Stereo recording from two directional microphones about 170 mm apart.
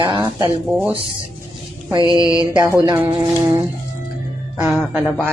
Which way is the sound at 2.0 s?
20° left (ahead or behind).